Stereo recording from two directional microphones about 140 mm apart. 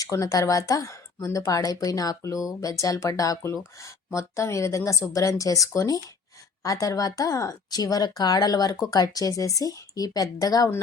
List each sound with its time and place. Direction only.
0.0 s speech: 25° left (ahead or behind)